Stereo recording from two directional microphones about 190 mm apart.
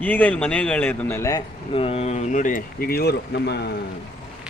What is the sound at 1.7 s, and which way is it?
Speech, 30° left (ahead or behind).